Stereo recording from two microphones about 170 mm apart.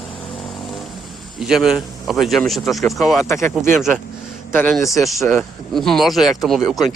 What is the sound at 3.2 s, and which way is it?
Speech, 15° left (ahead or behind).